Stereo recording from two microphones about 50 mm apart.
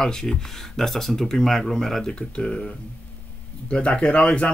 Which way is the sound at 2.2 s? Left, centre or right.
Centre.